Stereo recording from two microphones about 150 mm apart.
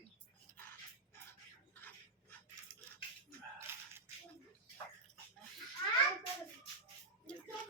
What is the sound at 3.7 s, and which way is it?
Whip, 15° right (ahead or behind).